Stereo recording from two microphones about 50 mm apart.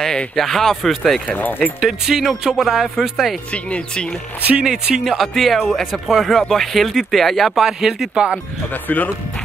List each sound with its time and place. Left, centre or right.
0.4 s speech: centre
1.2 s speech: left
1.8 s speech: centre
3.5 s speech: left
4.4 s speech: right
5.0 s speech: centre
8.8 s speech: left